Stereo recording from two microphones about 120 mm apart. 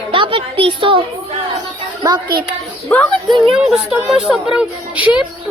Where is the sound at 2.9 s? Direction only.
10° left (ahead or behind).